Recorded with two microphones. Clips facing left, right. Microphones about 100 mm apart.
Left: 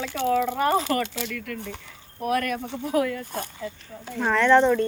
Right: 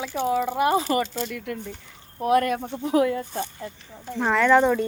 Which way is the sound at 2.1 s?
25° right (ahead or behind).